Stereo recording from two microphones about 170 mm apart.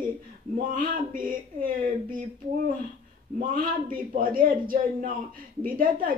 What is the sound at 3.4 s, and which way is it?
A man's voice, 55° right (ahead or behind).